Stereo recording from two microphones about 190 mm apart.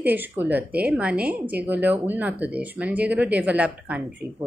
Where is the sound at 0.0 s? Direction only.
10° right (ahead or behind).